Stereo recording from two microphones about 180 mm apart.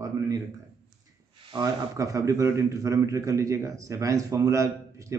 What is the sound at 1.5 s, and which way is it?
A man's voice, 20° right (ahead or behind).